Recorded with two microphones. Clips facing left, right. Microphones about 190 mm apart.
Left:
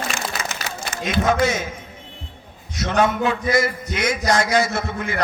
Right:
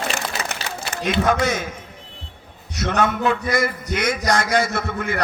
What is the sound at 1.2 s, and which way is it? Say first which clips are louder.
Speech: left 2 dB; 55° right (ahead or behind).